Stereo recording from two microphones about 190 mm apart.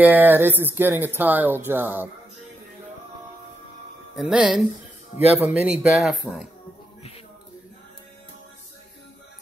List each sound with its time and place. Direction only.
0.0 s speech: 10° right (ahead or behind)
4.1 s speech: 5° right (ahead or behind)
5.1 s speech: 35° left (ahead or behind)
5.5 s speech: 5° right (ahead or behind)